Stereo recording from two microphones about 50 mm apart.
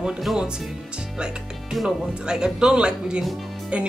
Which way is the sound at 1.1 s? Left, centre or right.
Centre.